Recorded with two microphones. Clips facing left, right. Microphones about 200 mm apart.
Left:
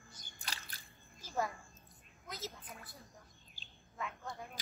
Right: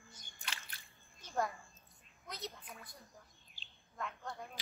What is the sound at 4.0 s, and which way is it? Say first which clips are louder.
Single-lens reflex camera: even; 5° left (ahead or behind).